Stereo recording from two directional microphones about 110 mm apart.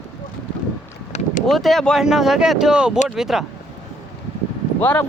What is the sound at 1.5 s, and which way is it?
Speech, centre (ahead or behind).